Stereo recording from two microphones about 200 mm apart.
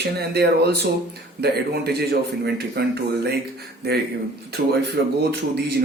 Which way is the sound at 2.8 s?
55° right (ahead or behind).